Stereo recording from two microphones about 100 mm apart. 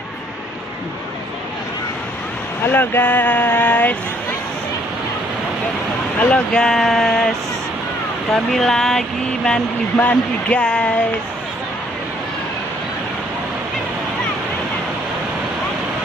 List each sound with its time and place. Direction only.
2.7 s speech: 20° left (ahead or behind)
6.1 s speech: 10° left (ahead or behind)
8.3 s speech: 5° left (ahead or behind)